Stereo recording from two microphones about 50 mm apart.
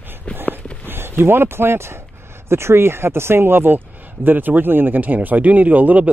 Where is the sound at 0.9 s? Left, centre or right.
Right.